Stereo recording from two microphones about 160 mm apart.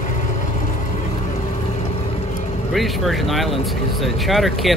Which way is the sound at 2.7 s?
Centre (ahead or behind).